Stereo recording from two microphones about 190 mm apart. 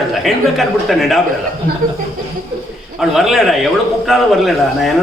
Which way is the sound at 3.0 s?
Centre (ahead or behind).